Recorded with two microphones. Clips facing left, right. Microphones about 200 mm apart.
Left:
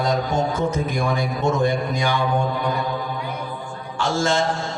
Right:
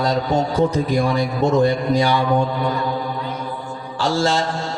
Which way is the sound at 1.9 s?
35° right (ahead or behind).